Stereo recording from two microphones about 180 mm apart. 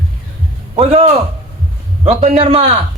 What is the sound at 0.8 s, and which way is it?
A man's voice, 35° right (ahead or behind).